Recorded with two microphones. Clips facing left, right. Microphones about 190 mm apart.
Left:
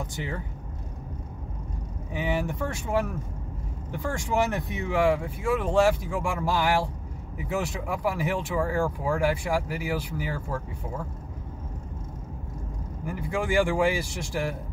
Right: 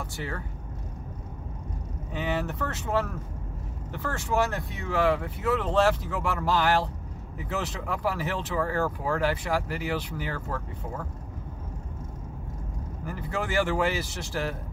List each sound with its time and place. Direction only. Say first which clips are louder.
0.0 s speech: left 2 dB; 15° left (ahead or behind)
2.1 s speech: left 1 dB; 10° left (ahead or behind)
13.0 s speech: left 3 dB; 10° left (ahead or behind)